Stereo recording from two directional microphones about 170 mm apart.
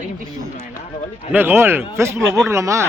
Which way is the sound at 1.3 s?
15° right (ahead or behind).